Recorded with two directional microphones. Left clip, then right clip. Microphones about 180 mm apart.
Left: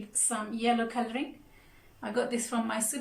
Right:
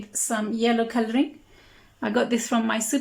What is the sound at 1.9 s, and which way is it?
A woman's voice, 50° right (ahead or behind).